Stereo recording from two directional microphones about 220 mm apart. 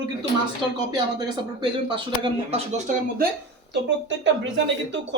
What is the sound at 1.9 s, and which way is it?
Speech, 25° right (ahead or behind).